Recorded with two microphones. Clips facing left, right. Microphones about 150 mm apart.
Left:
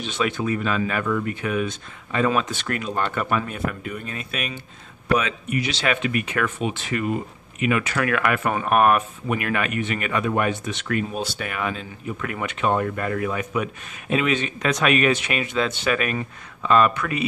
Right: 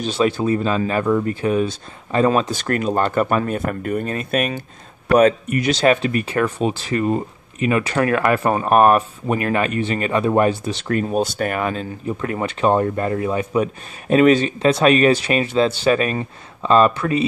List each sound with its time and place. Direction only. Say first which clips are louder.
0.0 s speech: right 6 dB; 35° right (ahead or behind)